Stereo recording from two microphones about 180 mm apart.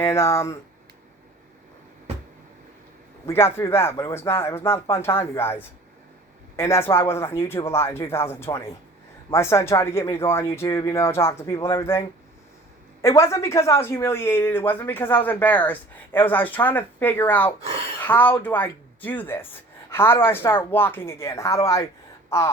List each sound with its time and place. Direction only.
0.0 s speech: 15° left (ahead or behind)
3.2 s speech: 15° left (ahead or behind)